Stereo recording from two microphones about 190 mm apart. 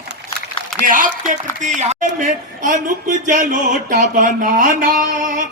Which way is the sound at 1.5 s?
40° right (ahead or behind).